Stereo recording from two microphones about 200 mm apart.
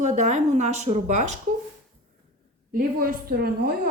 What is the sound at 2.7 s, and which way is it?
A woman's voice, 45° right (ahead or behind).